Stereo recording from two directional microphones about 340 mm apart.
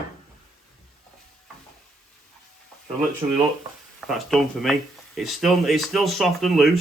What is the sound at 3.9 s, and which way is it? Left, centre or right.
Speech, centre.